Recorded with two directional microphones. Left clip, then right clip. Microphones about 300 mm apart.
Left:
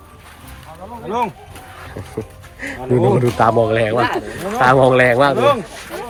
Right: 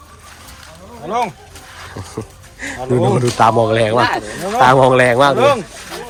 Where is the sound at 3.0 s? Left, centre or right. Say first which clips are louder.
Right 2 dB; centre.